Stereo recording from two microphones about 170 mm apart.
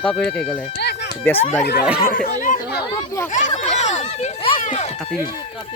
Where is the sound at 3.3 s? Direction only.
45° left (ahead or behind).